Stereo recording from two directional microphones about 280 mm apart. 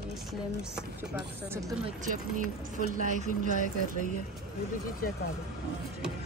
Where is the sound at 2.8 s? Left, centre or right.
Right.